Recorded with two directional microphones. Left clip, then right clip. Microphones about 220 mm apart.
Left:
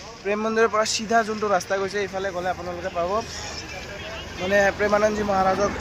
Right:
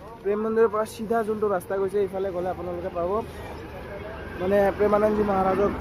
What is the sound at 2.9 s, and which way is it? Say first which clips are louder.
Speech: left 2 dB; 10° left (ahead or behind).